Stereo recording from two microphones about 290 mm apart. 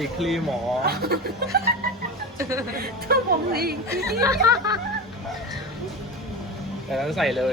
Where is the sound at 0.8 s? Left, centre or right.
Right.